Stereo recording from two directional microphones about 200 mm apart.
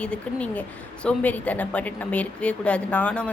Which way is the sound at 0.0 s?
5° left (ahead or behind).